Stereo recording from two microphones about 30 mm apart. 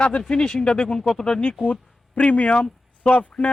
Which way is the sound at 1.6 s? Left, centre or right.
Left.